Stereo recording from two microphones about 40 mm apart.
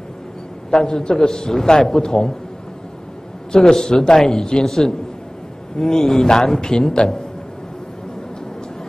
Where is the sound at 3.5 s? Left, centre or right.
Centre.